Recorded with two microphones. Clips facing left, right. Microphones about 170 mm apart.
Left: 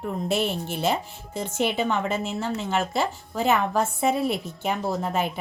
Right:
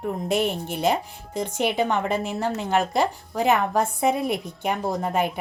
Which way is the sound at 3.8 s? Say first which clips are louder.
Right 1 dB; 10° right (ahead or behind).